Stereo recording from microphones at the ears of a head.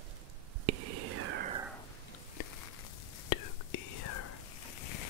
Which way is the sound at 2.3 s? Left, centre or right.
Left.